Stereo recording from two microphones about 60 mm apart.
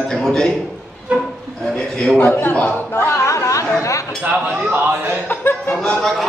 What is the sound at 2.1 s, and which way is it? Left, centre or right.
Chuckle, left.